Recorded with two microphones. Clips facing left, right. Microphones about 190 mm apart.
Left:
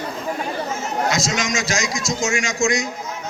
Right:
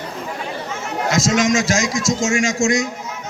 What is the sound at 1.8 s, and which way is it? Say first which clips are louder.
Speech: right 4 dB; 15° left (ahead or behind).